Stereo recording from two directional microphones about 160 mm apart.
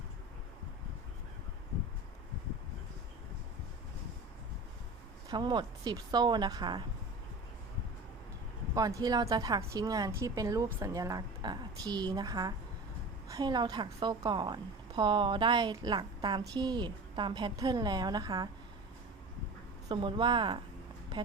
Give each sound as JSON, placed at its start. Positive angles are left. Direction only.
{"t": 5.3, "sound": "a woman's voice", "side_deg": -30}
{"t": 8.7, "sound": "a woman's voice", "side_deg": -20}
{"t": 19.9, "sound": "a woman's voice", "side_deg": -30}